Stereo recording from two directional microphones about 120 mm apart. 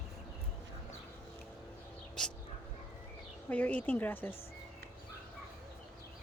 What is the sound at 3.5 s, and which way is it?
Speech, 10° left (ahead or behind).